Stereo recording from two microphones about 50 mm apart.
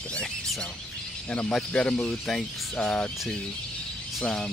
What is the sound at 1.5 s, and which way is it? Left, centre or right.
Speech, centre.